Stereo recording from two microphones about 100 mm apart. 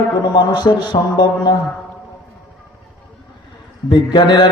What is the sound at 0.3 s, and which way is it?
A man's voice, 50° left (ahead or behind).